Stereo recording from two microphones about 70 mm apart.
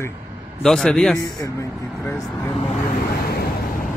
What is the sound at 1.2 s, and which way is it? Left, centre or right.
Speech, left.